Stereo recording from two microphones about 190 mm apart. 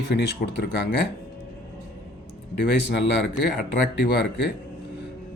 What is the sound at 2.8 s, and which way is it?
Speech, 65° left (ahead or behind).